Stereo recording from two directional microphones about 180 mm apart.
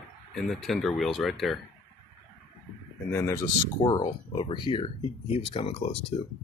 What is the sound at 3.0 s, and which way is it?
Speech, 15° left (ahead or behind).